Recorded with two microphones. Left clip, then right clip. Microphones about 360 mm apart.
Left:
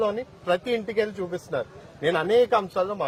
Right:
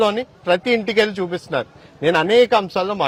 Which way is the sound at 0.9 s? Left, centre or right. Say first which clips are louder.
Right 8 dB; right.